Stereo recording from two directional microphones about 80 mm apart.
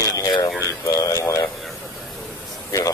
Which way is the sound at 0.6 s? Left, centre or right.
Left.